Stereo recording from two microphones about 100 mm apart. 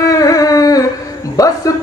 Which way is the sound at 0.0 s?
35° left (ahead or behind).